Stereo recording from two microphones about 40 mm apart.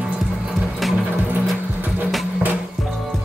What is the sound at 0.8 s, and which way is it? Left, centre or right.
Music, centre.